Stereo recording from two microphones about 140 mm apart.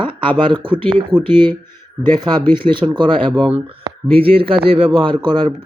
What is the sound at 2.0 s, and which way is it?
Speech, 15° left (ahead or behind).